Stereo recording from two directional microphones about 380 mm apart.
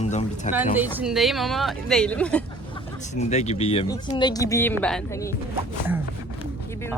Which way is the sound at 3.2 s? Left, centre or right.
Centre.